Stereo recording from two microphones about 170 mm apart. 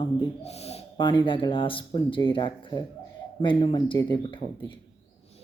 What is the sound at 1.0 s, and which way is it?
Speech, 25° left (ahead or behind).